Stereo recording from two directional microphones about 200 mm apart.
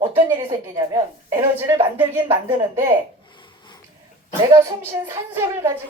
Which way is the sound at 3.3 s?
25° left (ahead or behind).